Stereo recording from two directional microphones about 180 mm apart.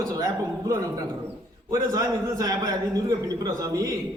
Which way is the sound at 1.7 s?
20° right (ahead or behind).